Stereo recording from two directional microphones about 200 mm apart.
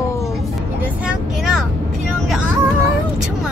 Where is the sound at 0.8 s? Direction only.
5° right (ahead or behind).